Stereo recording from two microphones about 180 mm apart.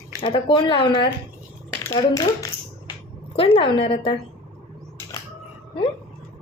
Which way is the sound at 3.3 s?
30° left (ahead or behind).